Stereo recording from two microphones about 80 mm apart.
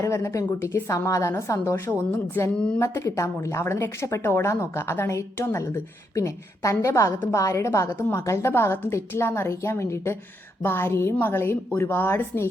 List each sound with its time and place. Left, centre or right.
0.1 s a woman's voice: left